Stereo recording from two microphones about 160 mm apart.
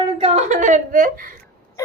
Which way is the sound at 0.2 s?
40° right (ahead or behind).